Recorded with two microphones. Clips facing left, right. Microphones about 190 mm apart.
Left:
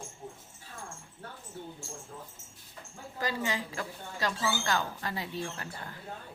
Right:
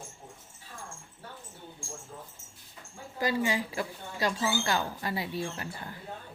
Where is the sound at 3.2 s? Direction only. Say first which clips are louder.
Right 4 dB; 10° right (ahead or behind).